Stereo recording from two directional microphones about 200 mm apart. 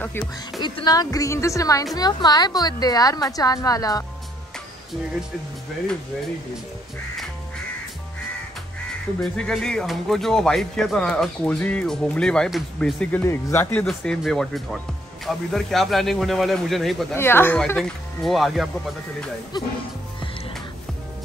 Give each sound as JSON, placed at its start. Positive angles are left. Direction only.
{"t": 0.6, "sound": "a woman's voice", "side_deg": 20}
{"t": 9.2, "sound": "speech", "side_deg": 5}
{"t": 17.1, "sound": "speech", "side_deg": 10}